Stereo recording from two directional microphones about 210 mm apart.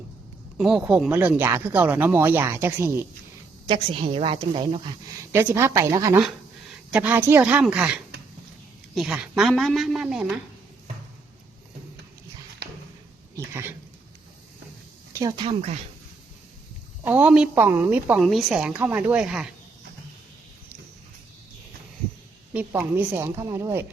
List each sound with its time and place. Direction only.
0.5 s speech: centre (ahead or behind)
3.7 s a woman's voice: 25° right (ahead or behind)
5.3 s speech: 10° right (ahead or behind)
6.2 s a woman's voice: 5° right (ahead or behind)
9.0 s a woman's voice: 5° right (ahead or behind)
13.3 s speech: 10° right (ahead or behind)
15.1 s a woman's voice: 20° right (ahead or behind)
17.1 s speech: 10° right (ahead or behind)
22.5 s speech: 10° right (ahead or behind)